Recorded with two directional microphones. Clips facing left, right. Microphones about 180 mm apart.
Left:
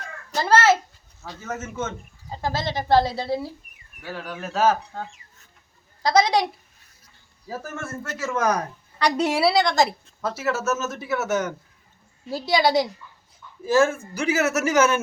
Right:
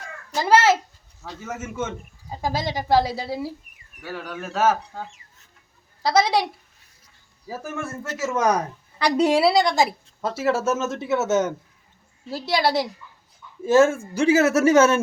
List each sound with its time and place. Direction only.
0.3 s speech: 15° right (ahead or behind)
7.4 s speech: 10° right (ahead or behind)
10.2 s speech: 30° right (ahead or behind)
12.3 s speech: centre (ahead or behind)
13.7 s speech: 25° right (ahead or behind)